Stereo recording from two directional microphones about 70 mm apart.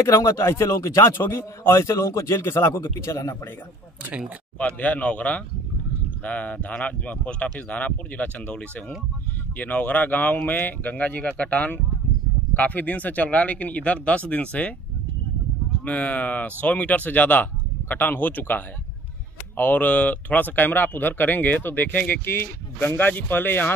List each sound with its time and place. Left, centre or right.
0.0 s speech: left
1.0 s a man's voice: left
4.6 s speech: left
15.8 s speech: left